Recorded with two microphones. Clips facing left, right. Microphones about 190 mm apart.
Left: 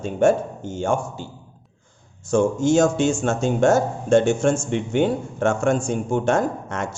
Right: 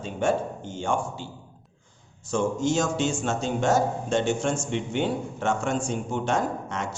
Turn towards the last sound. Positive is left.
turn(degrees=50)  # may be behind; listen again after turning